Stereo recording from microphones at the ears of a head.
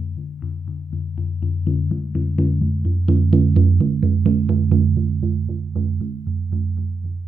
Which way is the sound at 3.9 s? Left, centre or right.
Right.